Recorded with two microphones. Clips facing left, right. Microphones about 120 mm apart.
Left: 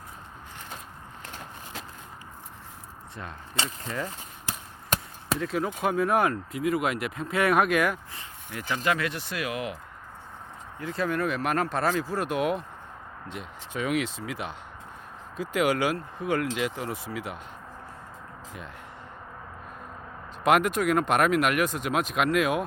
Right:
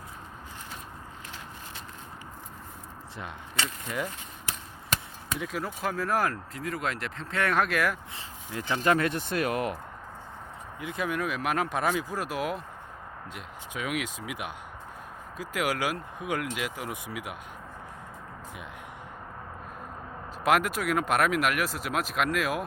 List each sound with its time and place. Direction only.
3.8 s speech: 5° right (ahead or behind)
5.4 s speech: 5° right (ahead or behind)
8.6 s speech: 35° right (ahead or behind)
10.8 s speech: 10° right (ahead or behind)
20.4 s speech: 5° right (ahead or behind)